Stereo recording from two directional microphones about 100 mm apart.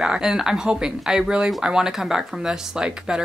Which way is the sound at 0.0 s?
5° right (ahead or behind).